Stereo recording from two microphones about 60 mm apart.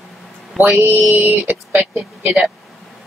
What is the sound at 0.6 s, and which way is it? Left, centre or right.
Speech, centre.